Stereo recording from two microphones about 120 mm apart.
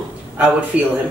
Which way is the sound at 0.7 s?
10° right (ahead or behind).